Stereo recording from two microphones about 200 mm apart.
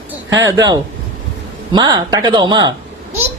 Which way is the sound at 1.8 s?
20° right (ahead or behind).